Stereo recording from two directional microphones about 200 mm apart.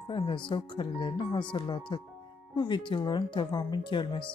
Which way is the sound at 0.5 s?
25° left (ahead or behind).